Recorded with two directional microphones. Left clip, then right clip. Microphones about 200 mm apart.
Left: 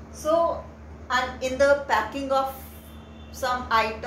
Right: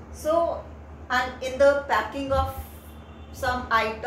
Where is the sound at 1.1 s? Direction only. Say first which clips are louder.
Left 1 dB; 25° left (ahead or behind).